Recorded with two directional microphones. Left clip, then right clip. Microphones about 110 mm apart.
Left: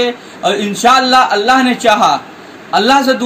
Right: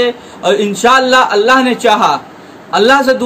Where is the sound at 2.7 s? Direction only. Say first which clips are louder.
Right 2 dB; 70° right (ahead or behind).